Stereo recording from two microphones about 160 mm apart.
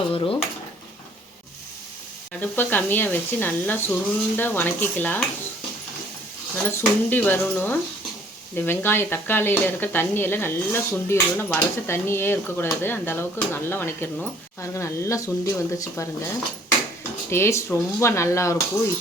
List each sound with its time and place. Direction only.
0.1 s speech: 35° left (ahead or behind)
2.4 s speech: 10° left (ahead or behind)
6.7 s speech: 10° left (ahead or behind)